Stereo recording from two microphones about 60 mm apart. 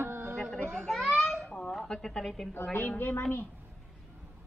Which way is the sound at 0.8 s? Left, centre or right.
Centre.